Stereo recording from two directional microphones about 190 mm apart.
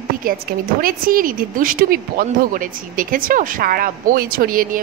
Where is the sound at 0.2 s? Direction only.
50° right (ahead or behind).